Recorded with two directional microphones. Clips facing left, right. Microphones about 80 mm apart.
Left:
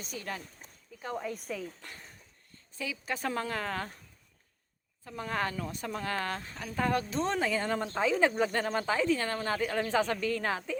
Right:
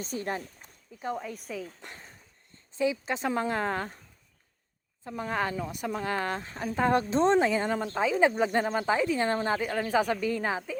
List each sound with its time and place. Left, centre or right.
0.0 s speech: right
1.1 s speech: centre
1.8 s speech: centre
5.0 s speech: centre
7.8 s speech: centre; by 9.6 s right
9.6 s speech: centre